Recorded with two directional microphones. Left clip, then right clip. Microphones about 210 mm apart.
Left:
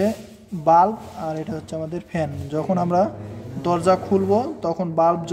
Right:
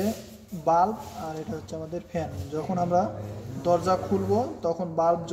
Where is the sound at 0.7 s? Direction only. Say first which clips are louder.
Left 7 dB; 30° left (ahead or behind).